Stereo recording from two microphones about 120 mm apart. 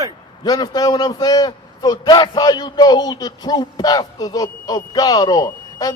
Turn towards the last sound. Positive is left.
turn(degrees=35)  # may be behind; listen again after turning